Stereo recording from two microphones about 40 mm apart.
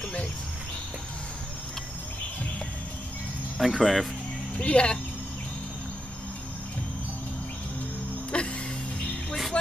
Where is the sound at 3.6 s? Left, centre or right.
Centre.